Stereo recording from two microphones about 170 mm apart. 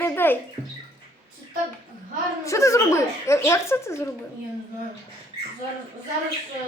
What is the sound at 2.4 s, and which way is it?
A child's voice, 20° left (ahead or behind).